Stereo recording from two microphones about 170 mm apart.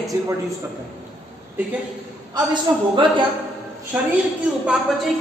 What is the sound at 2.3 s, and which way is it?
Speech, 30° right (ahead or behind).